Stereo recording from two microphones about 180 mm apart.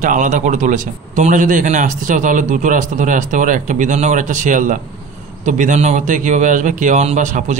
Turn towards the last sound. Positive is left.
turn(degrees=-40)  # may be behind; listen again after turning